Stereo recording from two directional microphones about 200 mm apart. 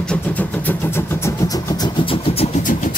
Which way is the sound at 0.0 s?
5° left (ahead or behind).